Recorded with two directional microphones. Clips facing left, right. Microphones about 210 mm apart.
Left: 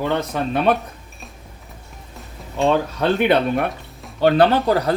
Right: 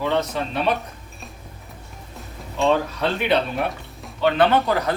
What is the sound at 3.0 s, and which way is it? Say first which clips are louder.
Speech: left 4 dB; 55° left (ahead or behind).